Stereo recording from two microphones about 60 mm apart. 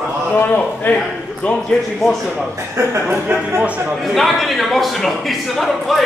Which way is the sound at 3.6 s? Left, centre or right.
Right.